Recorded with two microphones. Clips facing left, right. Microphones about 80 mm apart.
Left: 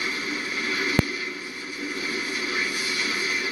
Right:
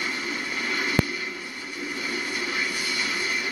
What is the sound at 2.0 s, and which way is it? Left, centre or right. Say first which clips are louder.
Vehicle: right 1 dB; right.